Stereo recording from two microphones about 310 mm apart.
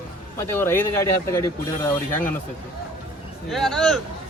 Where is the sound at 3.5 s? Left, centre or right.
Centre.